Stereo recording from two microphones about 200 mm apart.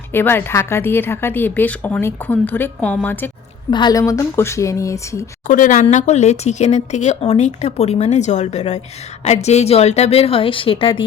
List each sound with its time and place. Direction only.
0.1 s a woman's voice: 10° left (ahead or behind)
3.7 s a woman's voice: 20° left (ahead or behind)
5.5 s speech: 40° left (ahead or behind)